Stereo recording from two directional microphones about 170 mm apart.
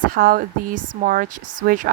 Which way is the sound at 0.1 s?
55° right (ahead or behind).